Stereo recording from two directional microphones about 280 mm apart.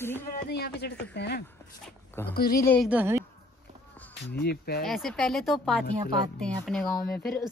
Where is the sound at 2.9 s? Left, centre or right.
Centre.